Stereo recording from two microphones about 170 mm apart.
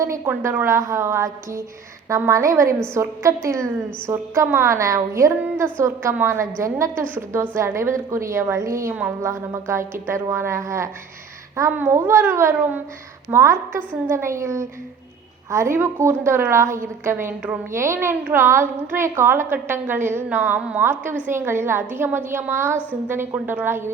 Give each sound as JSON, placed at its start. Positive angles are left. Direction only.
{"t": 0.0, "sound": "a woman's voice", "side_deg": -15}